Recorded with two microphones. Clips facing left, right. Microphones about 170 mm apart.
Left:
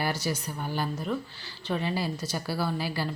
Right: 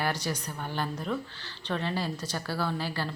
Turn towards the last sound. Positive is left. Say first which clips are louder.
# left 2 dB
turn(degrees=10)  # may be behind; listen again after turning